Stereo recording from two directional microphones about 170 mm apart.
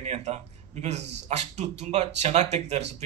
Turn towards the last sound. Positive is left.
turn(degrees=-40)  # may be behind; listen again after turning